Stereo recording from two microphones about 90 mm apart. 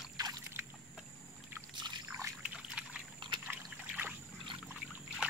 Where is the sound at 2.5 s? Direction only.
10° right (ahead or behind).